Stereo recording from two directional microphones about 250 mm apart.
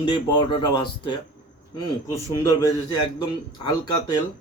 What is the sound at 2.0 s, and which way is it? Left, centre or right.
Speech, centre.